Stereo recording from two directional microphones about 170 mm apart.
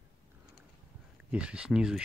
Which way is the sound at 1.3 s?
5° right (ahead or behind).